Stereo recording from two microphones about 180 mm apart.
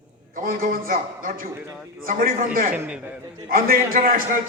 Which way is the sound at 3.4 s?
55° right (ahead or behind).